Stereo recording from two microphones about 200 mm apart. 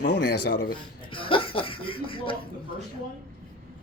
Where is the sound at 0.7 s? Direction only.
25° left (ahead or behind).